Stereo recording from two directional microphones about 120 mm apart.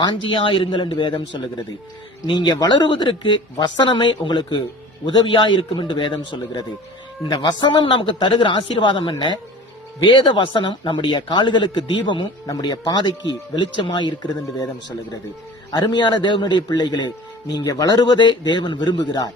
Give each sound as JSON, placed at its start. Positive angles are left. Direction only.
{"t": 0.0, "sound": "a man's voice", "side_deg": 45}
{"t": 15.7, "sound": "a woman's voice", "side_deg": 40}